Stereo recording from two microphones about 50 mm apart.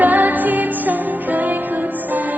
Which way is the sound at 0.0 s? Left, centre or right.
Right.